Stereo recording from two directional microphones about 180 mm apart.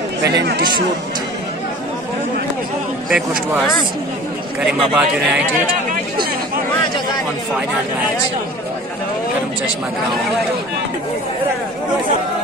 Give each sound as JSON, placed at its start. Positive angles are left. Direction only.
{"t": 0.2, "sound": "speech", "side_deg": -70}
{"t": 3.1, "sound": "speech", "side_deg": -5}